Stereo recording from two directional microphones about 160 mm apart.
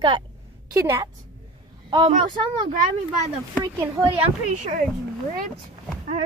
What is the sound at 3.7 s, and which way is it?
Speech, 30° right (ahead or behind).